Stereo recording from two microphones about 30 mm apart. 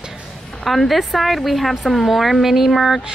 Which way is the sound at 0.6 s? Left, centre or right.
Centre.